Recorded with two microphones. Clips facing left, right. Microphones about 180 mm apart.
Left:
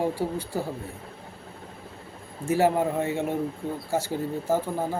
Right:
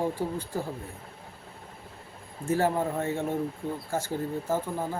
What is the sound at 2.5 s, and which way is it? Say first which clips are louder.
Speech: left 4 dB; 10° left (ahead or behind).